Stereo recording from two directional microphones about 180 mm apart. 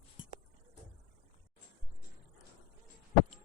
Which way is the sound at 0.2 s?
25° left (ahead or behind).